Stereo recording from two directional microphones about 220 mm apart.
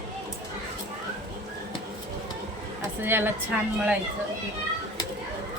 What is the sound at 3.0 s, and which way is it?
Speech, 10° right (ahead or behind).